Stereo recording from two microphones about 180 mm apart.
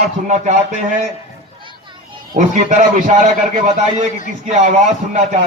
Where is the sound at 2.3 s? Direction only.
45° right (ahead or behind).